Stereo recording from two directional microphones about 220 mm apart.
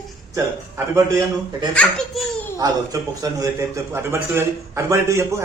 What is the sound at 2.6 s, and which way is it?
A man's voice, 15° right (ahead or behind).